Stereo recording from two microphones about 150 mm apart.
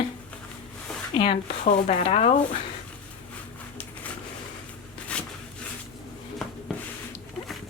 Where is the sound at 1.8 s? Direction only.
50° left (ahead or behind).